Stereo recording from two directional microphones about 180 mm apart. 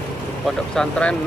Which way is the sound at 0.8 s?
5° left (ahead or behind).